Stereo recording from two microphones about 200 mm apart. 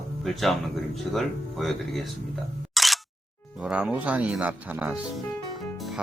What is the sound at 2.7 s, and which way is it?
Single-lens reflex camera, centre (ahead or behind).